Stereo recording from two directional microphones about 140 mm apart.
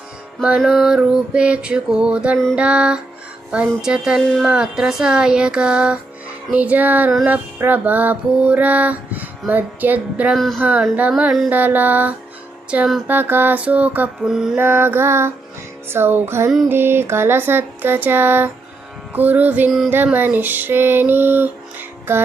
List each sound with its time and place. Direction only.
0.6 s music: centre (ahead or behind)
10.3 s music: centre (ahead or behind)
10.6 s music: 10° right (ahead or behind)
14.5 s music: 15° right (ahead or behind)
19.9 s female singing: 15° right (ahead or behind)